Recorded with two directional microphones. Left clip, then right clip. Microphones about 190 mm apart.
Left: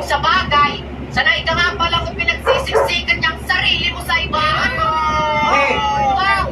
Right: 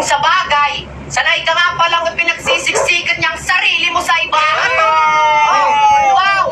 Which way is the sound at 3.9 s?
45° right (ahead or behind).